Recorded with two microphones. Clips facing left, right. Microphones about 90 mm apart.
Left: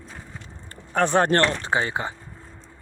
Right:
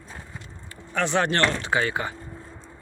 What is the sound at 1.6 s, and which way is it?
Speech, 30° left (ahead or behind).